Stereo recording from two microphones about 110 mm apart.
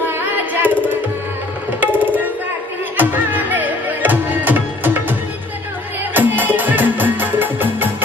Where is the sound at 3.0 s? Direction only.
15° right (ahead or behind).